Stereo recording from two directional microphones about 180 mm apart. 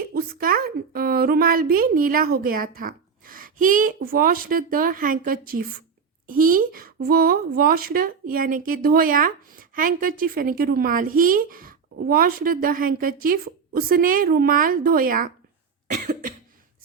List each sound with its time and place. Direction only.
0.0 s a woman's voice: 55° right (ahead or behind)